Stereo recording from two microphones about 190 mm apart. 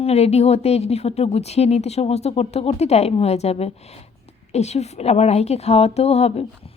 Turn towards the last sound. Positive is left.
turn(degrees=35)  # may be behind; listen again after turning